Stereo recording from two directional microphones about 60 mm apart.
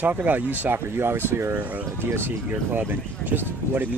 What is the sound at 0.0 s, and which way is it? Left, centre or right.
Speech, right.